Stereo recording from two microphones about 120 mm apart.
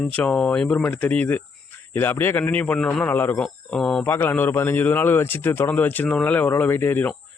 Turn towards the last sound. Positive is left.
turn(degrees=15)  # may be behind; listen again after turning